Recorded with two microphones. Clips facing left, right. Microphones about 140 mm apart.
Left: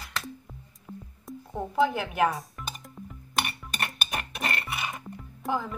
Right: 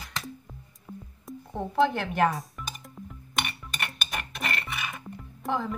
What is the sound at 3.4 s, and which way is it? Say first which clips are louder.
Music: left 2 dB; 40° left (ahead or behind).